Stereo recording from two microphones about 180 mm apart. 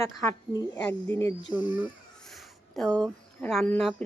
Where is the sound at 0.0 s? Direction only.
15° left (ahead or behind).